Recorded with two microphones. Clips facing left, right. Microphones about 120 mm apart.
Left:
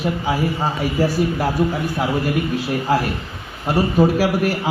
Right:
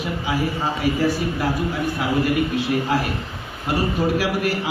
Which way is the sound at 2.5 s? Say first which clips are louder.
Left 2 dB; 40° left (ahead or behind).